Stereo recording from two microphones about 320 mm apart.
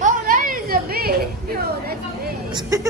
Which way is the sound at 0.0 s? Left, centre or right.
Right.